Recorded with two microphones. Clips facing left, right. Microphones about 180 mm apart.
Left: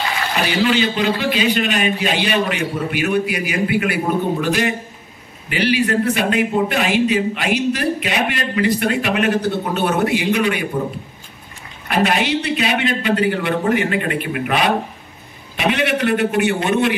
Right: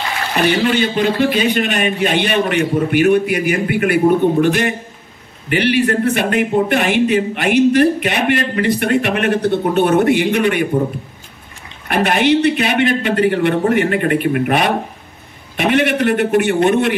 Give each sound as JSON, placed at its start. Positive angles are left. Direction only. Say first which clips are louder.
{"t": 0.4, "sound": "a man's voice", "louder": "right 3 dB", "side_deg": -50}
{"t": 11.9, "sound": "speech", "louder": "right 4 dB", "side_deg": -55}